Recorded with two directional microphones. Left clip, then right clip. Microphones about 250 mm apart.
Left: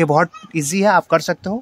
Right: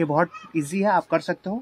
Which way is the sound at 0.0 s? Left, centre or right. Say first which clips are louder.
Left 7 dB; left.